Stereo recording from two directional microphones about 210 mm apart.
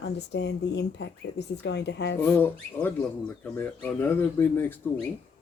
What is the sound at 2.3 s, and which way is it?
Speech, 10° left (ahead or behind).